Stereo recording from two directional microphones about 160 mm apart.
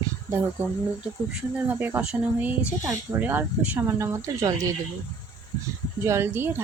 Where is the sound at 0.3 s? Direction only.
15° right (ahead or behind).